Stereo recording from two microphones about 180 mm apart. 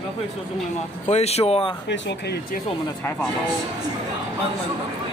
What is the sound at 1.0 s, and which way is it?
Speech, 35° left (ahead or behind).